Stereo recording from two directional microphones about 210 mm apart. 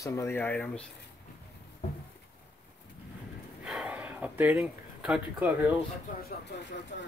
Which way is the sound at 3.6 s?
5° right (ahead or behind).